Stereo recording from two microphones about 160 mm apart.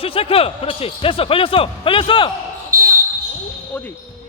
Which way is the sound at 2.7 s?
60° right (ahead or behind).